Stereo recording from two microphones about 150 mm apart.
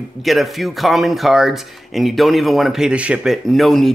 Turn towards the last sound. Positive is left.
turn(degrees=0)  # may be behind; listen again after turning